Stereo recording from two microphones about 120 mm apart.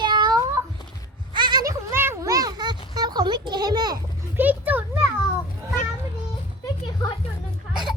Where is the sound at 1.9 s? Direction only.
20° right (ahead or behind); by 4.0 s 35° right (ahead or behind).